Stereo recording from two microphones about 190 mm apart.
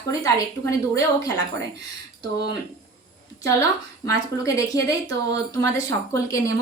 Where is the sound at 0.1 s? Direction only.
15° left (ahead or behind).